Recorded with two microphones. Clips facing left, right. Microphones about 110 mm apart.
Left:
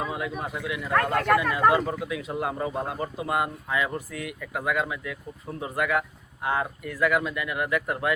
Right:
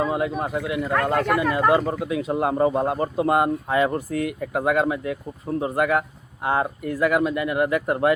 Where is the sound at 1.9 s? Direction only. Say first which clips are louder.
Right 6 dB; 35° right (ahead or behind).